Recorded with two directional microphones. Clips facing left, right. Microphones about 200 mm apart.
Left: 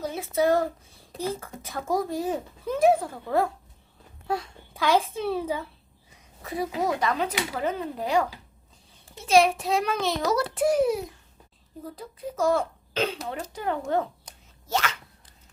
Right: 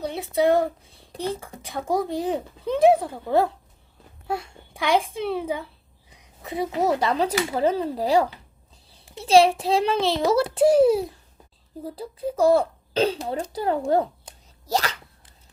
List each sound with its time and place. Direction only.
0.1 s female singing: 15° right (ahead or behind)
1.0 s a sound: centre (ahead or behind)
1.4 s a child's voice: 15° right (ahead or behind)
4.3 s a child's voice: 10° right (ahead or behind)
6.1 s a sound: 20° right (ahead or behind)
6.8 s a child's voice: 30° right (ahead or behind)